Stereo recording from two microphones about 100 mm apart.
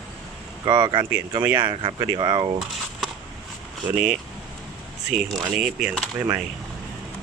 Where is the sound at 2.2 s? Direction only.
45° right (ahead or behind).